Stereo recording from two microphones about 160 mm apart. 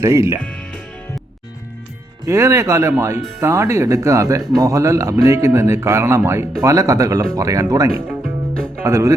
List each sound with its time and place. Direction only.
0.0 s speech: 20° right (ahead or behind)
0.4 s music: 5° left (ahead or behind)
2.2 s speech: 20° right (ahead or behind)